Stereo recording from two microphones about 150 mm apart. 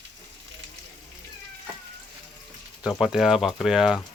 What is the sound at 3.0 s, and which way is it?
Speech, 5° right (ahead or behind).